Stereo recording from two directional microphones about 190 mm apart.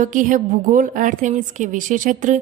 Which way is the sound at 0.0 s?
45° right (ahead or behind).